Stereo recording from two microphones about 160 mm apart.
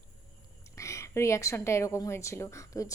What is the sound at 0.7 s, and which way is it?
A woman's voice, 20° left (ahead or behind).